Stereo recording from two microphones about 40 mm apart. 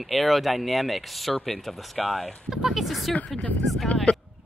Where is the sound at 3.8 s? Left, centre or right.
Left.